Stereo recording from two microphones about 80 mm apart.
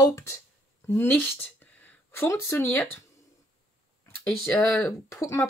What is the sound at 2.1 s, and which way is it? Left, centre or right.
Speech, left.